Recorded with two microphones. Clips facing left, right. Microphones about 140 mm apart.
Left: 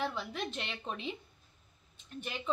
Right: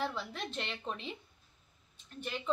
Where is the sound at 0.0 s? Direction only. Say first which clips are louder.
Left 1 dB; centre (ahead or behind).